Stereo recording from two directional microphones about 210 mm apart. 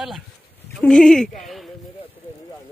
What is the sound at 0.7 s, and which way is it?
Speech, 5° left (ahead or behind).